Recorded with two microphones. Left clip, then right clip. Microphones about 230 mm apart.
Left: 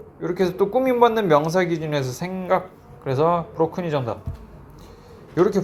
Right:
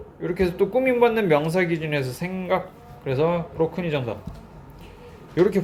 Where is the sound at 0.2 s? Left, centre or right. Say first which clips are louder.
Left 1 dB; centre.